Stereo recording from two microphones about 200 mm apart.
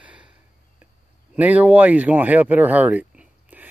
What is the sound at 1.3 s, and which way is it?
Speech, 10° right (ahead or behind).